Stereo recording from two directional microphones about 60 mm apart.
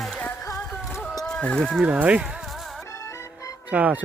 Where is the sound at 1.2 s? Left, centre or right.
Centre.